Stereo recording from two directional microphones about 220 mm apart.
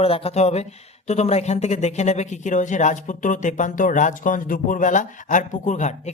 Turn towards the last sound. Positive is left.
turn(degrees=35)  # may be behind; listen again after turning